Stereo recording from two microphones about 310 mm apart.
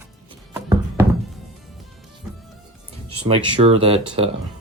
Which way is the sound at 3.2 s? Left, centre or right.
Centre.